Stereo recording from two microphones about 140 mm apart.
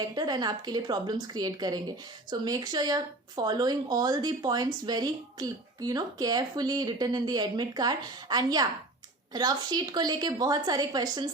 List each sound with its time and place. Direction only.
0.0 s speech: 30° right (ahead or behind)